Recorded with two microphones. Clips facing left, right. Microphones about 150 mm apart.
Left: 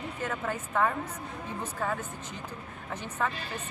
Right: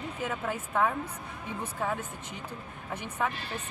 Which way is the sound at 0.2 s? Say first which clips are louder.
Even; 5° right (ahead or behind).